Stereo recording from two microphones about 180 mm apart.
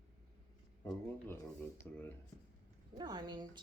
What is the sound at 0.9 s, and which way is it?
Speech, 15° left (ahead or behind).